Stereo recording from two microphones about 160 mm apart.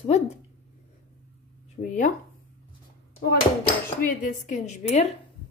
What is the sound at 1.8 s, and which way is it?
Speech, 55° left (ahead or behind).